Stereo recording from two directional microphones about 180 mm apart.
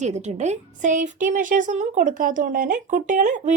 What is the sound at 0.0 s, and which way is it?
A woman's voice, 40° right (ahead or behind).